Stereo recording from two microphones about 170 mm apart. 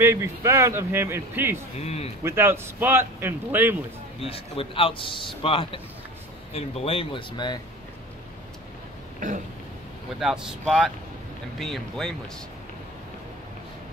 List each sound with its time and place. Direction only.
0.0 s a man's voice: 15° right (ahead or behind)
1.8 s a man's voice: 40° left (ahead or behind)
2.2 s a man's voice: 15° right (ahead or behind)
4.2 s a man's voice: 35° left (ahead or behind)
10.1 s speech: 5° right (ahead or behind)